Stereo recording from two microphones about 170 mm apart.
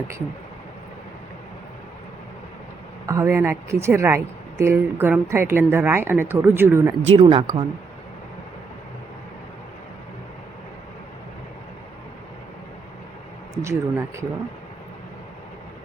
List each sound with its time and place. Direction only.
3.1 s speech: 15° right (ahead or behind)
7.1 s speech: 35° right (ahead or behind)
13.6 s speech: 15° right (ahead or behind)